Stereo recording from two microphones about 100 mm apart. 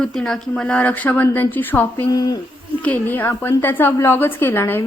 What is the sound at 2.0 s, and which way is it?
Speech, 40° left (ahead or behind).